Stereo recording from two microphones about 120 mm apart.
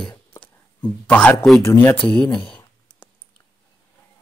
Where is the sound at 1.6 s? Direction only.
20° left (ahead or behind).